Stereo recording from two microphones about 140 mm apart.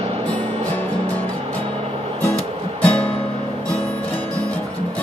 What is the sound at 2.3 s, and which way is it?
Music, 10° left (ahead or behind).